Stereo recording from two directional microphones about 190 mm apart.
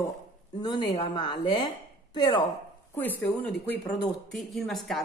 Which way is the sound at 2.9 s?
10° left (ahead or behind).